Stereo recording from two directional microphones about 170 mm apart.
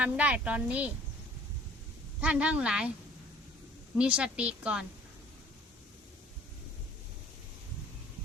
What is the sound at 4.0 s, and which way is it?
Speech, 5° right (ahead or behind).